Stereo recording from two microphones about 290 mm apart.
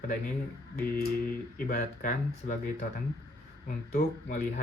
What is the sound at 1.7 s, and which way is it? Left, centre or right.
Speech, left.